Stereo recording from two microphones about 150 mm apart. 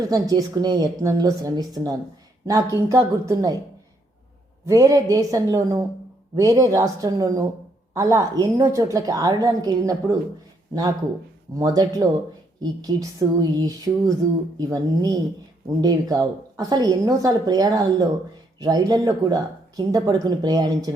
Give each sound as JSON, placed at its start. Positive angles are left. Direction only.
{"t": 0.1, "sound": "a woman's voice", "side_deg": -25}
{"t": 4.6, "sound": "a woman's voice", "side_deg": -20}
{"t": 11.5, "sound": "a woman's voice", "side_deg": -25}